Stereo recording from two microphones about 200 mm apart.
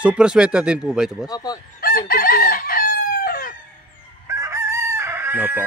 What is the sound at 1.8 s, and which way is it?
Chicken, 50° left (ahead or behind).